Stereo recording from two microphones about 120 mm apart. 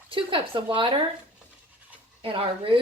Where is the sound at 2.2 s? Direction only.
50° right (ahead or behind).